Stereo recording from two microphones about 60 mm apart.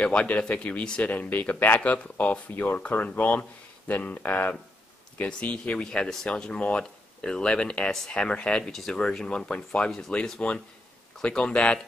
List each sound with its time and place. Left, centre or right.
0.0 s speech: left
9.8 s speech: centre
10.4 s speech: left